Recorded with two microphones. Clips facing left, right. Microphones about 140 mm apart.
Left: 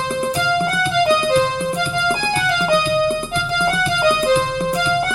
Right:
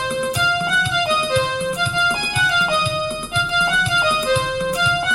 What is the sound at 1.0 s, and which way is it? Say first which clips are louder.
Music: left 5 dB; 40° left (ahead or behind).